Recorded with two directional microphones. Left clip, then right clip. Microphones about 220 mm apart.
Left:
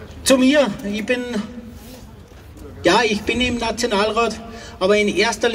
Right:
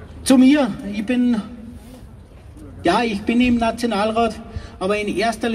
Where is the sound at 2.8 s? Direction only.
15° right (ahead or behind).